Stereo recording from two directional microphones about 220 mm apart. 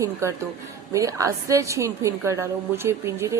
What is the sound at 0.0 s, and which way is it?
Speech, 10° right (ahead or behind).